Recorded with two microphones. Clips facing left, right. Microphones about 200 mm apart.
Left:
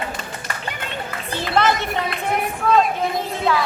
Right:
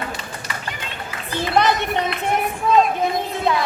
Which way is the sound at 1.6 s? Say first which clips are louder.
Right 1 dB; 20° right (ahead or behind).